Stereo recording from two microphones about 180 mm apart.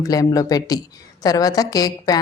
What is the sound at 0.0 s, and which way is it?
A woman's voice, 20° left (ahead or behind).